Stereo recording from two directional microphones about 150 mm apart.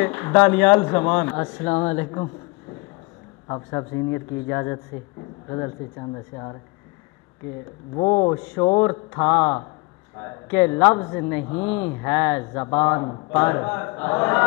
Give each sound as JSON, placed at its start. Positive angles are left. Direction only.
{"t": 0.0, "sound": "a woman's voice", "side_deg": 10}
{"t": 7.9, "sound": "speech", "side_deg": 15}